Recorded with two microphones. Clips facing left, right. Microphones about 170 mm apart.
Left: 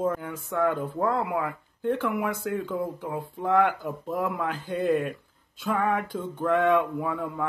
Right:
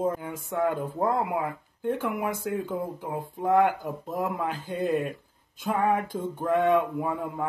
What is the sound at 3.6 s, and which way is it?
Speech, 40° right (ahead or behind).